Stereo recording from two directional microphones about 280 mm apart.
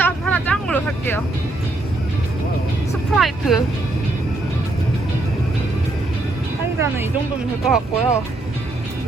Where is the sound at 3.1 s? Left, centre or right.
Centre.